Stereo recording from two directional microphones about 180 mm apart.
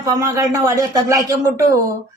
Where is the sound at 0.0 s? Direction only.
20° right (ahead or behind).